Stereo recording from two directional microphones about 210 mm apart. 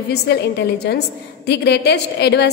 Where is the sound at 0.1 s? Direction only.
50° left (ahead or behind).